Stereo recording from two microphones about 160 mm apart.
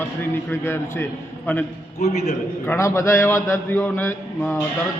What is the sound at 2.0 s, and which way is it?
Speech, 45° left (ahead or behind).